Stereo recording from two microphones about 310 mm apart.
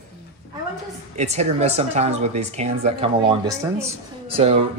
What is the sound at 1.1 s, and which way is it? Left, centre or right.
Speech, right.